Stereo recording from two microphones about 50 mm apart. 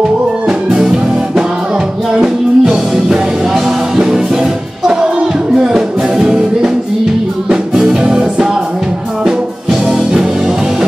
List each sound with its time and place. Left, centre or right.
0.5 s music: right
2.2 s music: centre
5.6 s music: centre